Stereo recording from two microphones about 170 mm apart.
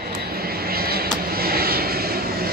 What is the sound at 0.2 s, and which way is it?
Vehicle, 65° right (ahead or behind).